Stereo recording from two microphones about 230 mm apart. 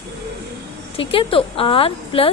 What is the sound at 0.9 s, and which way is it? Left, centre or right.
Speech, left.